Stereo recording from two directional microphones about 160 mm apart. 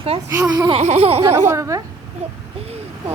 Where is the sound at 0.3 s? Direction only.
15° right (ahead or behind).